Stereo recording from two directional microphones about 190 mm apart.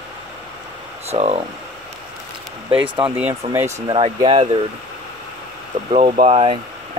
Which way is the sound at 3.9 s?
25° right (ahead or behind).